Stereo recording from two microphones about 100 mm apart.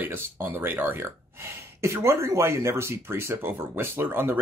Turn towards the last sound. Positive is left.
turn(degrees=-20)  # may be behind; listen again after turning